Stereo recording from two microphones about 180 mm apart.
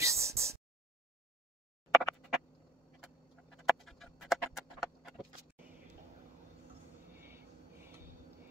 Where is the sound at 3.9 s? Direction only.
Centre (ahead or behind).